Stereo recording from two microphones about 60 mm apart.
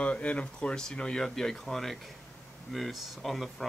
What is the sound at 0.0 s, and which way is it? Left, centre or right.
Speech, left.